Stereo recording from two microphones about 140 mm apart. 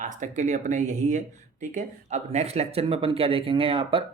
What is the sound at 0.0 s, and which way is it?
Speech, 65° right (ahead or behind).